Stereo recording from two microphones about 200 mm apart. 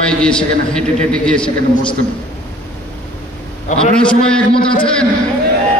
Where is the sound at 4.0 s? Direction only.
5° left (ahead or behind).